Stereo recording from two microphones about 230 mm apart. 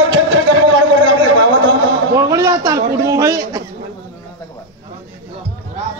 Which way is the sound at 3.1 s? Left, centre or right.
Centre.